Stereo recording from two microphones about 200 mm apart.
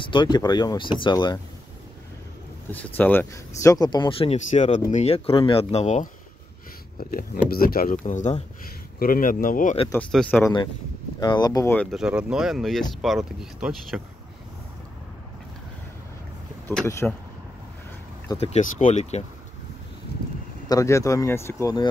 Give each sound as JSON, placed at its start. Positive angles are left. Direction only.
{"t": 0.0, "sound": "speech", "side_deg": 25}
{"t": 2.7, "sound": "speech", "side_deg": 10}
{"t": 7.0, "sound": "speech", "side_deg": 45}
{"t": 10.1, "sound": "speech", "side_deg": 0}
{"t": 11.1, "sound": "speech", "side_deg": 20}
{"t": 16.6, "sound": "speech", "side_deg": 10}
{"t": 18.4, "sound": "speech", "side_deg": 35}
{"t": 20.6, "sound": "speech", "side_deg": 15}